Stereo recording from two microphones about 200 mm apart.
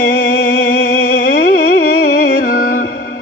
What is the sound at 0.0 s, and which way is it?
Music, 45° left (ahead or behind).